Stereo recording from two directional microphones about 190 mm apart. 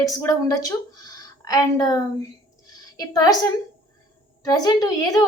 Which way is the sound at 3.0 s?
20° left (ahead or behind).